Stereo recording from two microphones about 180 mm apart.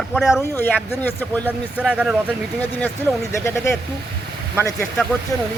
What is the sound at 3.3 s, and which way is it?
Speech, 15° left (ahead or behind).